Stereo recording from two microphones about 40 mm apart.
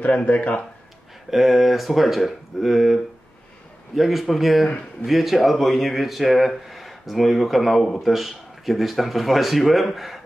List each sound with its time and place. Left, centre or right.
0.0 s speech: left
1.3 s speech: centre